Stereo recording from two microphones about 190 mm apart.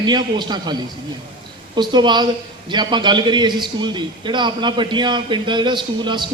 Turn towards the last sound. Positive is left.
turn(degrees=-25)  # may be behind; listen again after turning